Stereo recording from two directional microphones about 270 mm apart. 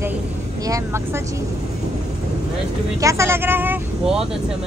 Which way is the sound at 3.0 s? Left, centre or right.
Centre.